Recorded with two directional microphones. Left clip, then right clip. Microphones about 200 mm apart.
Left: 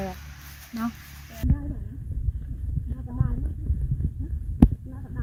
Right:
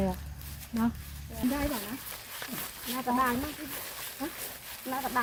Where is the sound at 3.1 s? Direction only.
40° right (ahead or behind).